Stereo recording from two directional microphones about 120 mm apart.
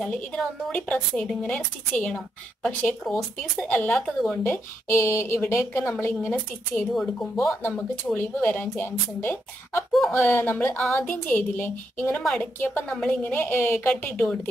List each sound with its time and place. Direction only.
0.0 s a woman's voice: 10° left (ahead or behind)
4.4 s speech: 20° left (ahead or behind)
6.3 s a woman's voice: 5° left (ahead or behind)